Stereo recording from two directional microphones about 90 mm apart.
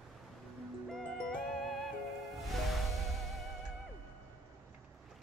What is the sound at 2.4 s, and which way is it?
Music, centre (ahead or behind).